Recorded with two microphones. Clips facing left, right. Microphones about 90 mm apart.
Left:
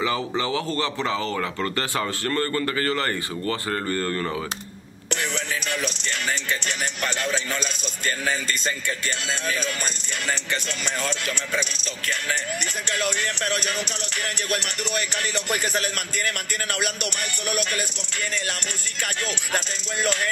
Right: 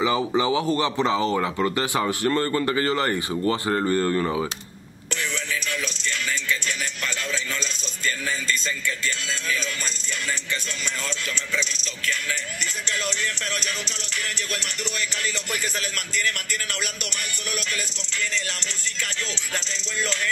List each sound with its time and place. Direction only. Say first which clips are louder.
0.0 s speech: right 3 dB; 15° right (ahead or behind)
8.3 s music: left 1 dB; 55° left (ahead or behind)
14.5 s music: left 4 dB; 60° left (ahead or behind)
19.5 s speech: left 3 dB; 55° left (ahead or behind)